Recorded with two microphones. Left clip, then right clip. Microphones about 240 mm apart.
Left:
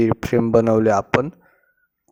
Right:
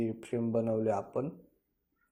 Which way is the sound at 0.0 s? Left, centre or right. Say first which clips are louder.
Left 16 dB; left.